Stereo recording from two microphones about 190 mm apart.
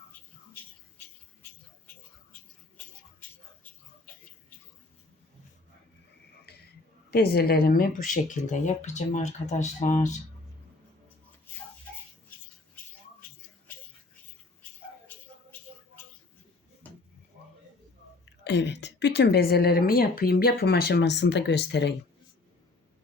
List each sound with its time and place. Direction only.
2.7 s a sound: 10° left (ahead or behind)
7.1 s speech: 55° left (ahead or behind); by 10.2 s 40° left (ahead or behind)
18.4 s speech: 65° left (ahead or behind)